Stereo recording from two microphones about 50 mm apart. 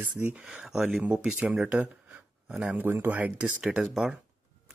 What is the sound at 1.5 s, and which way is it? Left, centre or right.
Speech, right.